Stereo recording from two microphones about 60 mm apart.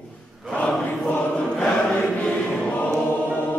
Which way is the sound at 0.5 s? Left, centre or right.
Centre.